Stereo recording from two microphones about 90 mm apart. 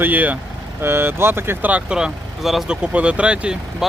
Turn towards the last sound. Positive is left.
turn(degrees=-10)  # may be behind; listen again after turning